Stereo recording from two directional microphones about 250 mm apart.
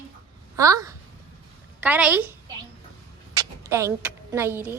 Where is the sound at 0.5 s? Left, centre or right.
Centre.